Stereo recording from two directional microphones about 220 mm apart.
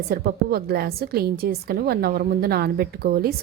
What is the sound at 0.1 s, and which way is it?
A woman's voice, 45° right (ahead or behind).